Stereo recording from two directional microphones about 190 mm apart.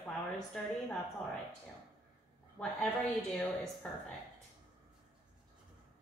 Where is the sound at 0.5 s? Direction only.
5° left (ahead or behind).